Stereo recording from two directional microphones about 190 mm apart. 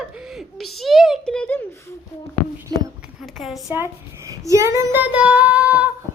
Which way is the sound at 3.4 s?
Centre (ahead or behind).